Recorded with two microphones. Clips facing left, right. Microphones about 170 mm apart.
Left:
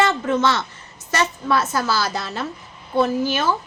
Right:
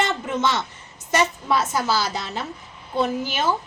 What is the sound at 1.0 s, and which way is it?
A woman's voice, 15° right (ahead or behind).